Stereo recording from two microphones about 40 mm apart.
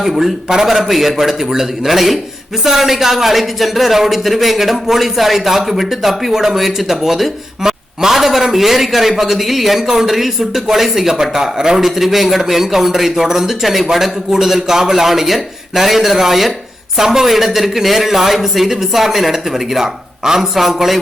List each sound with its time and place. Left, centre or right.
0.0 s a man's voice: centre